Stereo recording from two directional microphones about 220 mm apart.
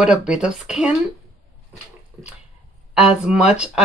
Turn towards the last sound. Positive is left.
turn(degrees=-5)  # may be behind; listen again after turning